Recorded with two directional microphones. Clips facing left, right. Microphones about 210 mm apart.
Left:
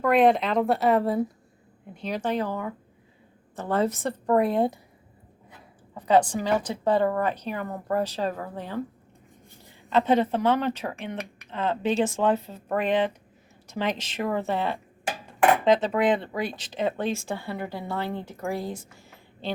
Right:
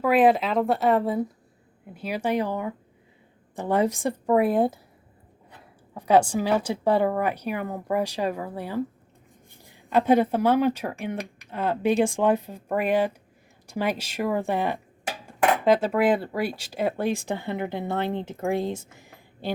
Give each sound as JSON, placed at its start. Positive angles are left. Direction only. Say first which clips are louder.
{"t": 0.0, "sound": "speech", "louder": "right 1 dB", "side_deg": -5}
{"t": 5.9, "sound": "speech", "louder": "right 1 dB", "side_deg": -10}
{"t": 9.9, "sound": "speech", "louder": "right 2 dB", "side_deg": -10}